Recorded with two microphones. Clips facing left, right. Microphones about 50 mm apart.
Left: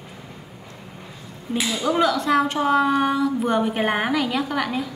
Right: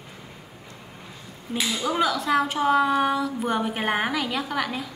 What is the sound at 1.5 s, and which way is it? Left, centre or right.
Speech, centre.